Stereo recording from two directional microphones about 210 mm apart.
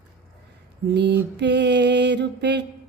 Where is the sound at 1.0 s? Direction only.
55° right (ahead or behind).